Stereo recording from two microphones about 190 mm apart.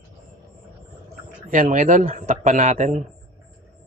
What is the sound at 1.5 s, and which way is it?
Speech, 40° right (ahead or behind).